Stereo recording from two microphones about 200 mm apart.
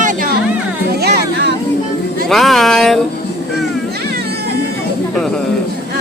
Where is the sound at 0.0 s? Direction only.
40° right (ahead or behind).